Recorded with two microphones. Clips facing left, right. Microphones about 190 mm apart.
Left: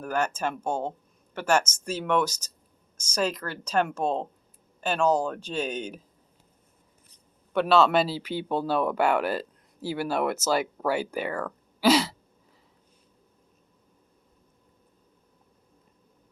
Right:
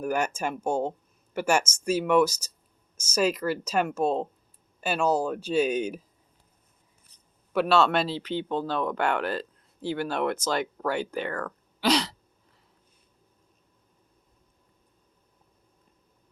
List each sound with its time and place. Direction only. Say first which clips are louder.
0.0 s speech: even; 10° right (ahead or behind)
7.5 s speech: left 2 dB; centre (ahead or behind)